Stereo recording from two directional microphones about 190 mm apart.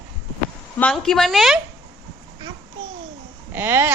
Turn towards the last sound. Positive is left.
turn(degrees=-10)  # may be behind; listen again after turning